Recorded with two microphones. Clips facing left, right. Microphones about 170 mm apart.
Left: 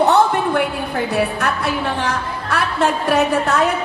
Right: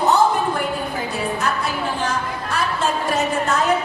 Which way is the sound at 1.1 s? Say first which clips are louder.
Left 3 dB; 65° left (ahead or behind).